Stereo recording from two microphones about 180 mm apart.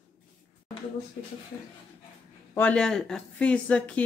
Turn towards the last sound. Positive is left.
turn(degrees=5)  # may be behind; listen again after turning